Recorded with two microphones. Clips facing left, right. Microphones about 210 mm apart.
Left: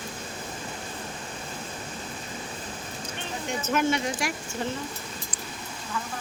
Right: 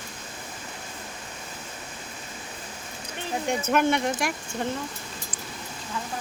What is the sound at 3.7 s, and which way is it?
Speech, 55° right (ahead or behind).